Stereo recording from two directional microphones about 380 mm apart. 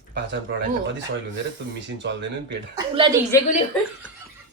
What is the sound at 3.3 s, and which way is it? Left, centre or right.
Speech, centre.